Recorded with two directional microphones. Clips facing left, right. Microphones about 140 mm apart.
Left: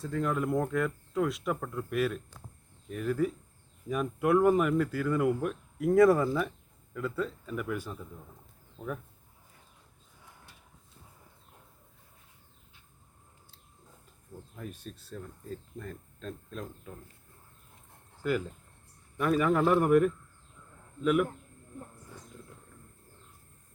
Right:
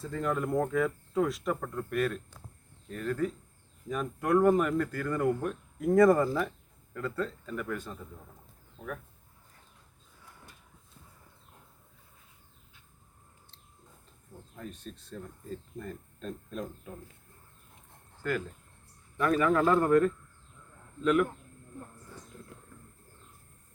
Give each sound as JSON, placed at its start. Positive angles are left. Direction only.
{"t": 0.0, "sound": "speech", "side_deg": 0}
{"t": 14.5, "sound": "speech", "side_deg": 5}
{"t": 18.2, "sound": "speech", "side_deg": 15}